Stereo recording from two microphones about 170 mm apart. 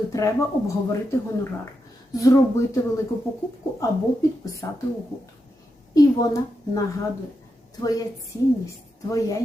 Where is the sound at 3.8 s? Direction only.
20° left (ahead or behind).